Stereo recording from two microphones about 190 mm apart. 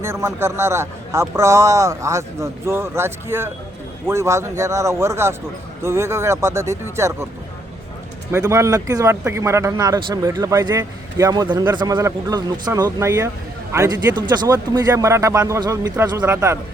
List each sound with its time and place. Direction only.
0.0 s a man's voice: 15° right (ahead or behind)
8.3 s a man's voice: 15° right (ahead or behind)